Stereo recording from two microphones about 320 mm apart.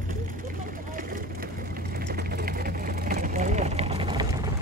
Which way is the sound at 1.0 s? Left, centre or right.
Right.